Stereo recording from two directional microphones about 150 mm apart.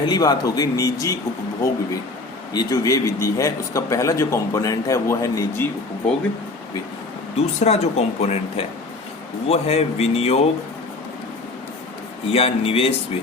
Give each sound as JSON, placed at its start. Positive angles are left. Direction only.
{"t": 0.0, "sound": "a man's voice", "side_deg": 30}
{"t": 2.5, "sound": "a man's voice", "side_deg": 25}
{"t": 7.3, "sound": "speech", "side_deg": 45}
{"t": 12.3, "sound": "speech", "side_deg": 40}